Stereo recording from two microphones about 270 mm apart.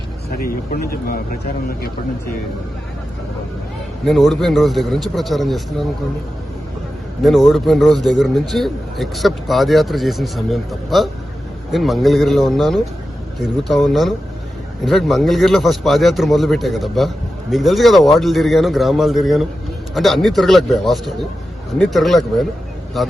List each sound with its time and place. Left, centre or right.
0.3 s speech: left
4.0 s a man's voice: centre
7.2 s a man's voice: centre